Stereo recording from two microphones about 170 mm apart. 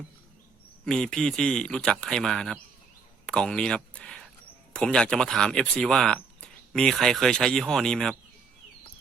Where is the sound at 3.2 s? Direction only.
5° left (ahead or behind).